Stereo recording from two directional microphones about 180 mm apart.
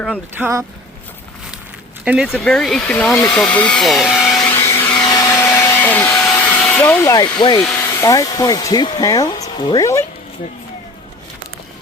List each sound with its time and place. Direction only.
0.3 s speech: 10° right (ahead or behind)
2.0 s speech: 5° right (ahead or behind)
4.5 s vacuum cleaner: 15° left (ahead or behind)
6.3 s hair dryer: 10° left (ahead or behind)
7.3 s speech: 25° left (ahead or behind)
7.6 s a sound: 5° left (ahead or behind)
7.9 s speech: 20° left (ahead or behind)